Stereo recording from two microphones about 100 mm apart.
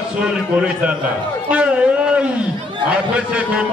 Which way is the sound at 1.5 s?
10° right (ahead or behind).